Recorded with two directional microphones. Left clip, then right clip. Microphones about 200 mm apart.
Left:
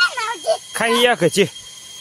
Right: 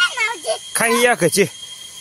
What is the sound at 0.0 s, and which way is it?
Jingle bell, 15° left (ahead or behind).